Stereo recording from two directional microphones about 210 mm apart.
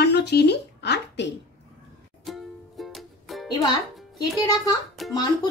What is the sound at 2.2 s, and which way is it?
Music, centre (ahead or behind).